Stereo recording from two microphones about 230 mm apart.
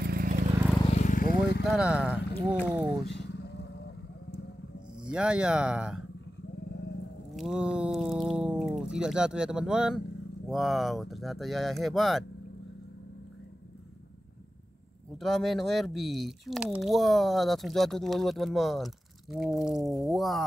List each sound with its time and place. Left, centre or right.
0.0 s vehicle: right
0.7 s vehicle: left
1.6 s speech: centre
3.1 s vehicle: left
5.0 s speech: centre
7.3 s speech: centre
15.1 s speech: centre